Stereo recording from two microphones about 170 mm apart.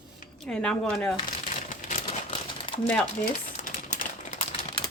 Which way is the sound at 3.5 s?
50° left (ahead or behind).